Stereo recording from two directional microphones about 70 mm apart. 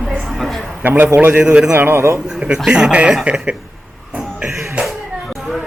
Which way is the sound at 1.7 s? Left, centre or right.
Right.